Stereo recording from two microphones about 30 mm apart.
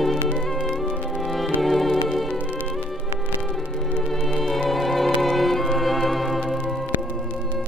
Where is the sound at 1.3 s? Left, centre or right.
Centre.